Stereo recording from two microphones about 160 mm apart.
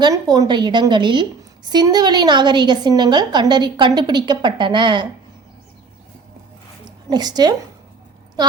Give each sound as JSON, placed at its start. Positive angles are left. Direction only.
{"t": 0.0, "sound": "a woman's voice", "side_deg": -25}
{"t": 7.1, "sound": "a woman's voice", "side_deg": -25}